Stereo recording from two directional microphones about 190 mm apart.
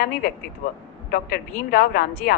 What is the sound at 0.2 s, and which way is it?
A woman's voice, 50° left (ahead or behind).